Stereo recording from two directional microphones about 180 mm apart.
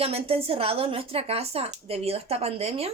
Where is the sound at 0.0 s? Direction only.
35° right (ahead or behind).